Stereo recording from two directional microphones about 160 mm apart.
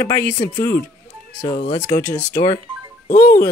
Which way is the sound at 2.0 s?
20° left (ahead or behind).